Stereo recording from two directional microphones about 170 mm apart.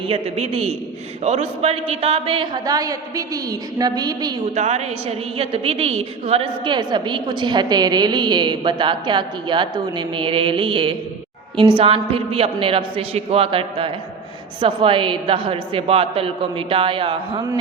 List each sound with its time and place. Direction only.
0.1 s a woman's voice: 35° right (ahead or behind)
4.5 s a woman's voice: 40° right (ahead or behind)